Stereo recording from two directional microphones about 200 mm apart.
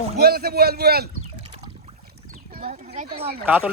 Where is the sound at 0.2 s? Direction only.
50° right (ahead or behind).